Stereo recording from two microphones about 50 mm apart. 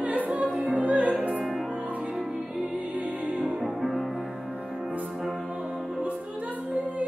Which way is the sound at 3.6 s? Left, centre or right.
Centre.